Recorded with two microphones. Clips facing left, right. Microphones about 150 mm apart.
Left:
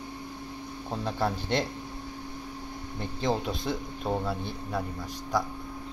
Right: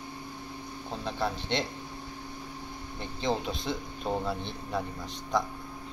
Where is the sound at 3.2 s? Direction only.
10° left (ahead or behind).